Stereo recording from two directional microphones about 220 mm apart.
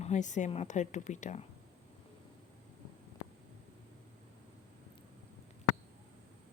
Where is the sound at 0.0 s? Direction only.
35° left (ahead or behind).